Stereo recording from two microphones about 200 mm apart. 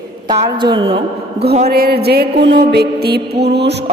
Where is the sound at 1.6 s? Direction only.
50° right (ahead or behind).